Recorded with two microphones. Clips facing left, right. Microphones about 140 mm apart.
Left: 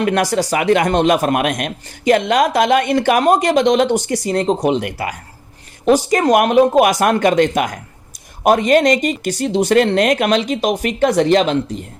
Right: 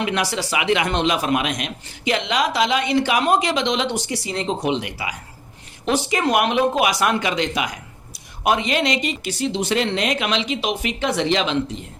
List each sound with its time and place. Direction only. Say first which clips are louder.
0.0 s a man's voice: left 7 dB; 45° left (ahead or behind)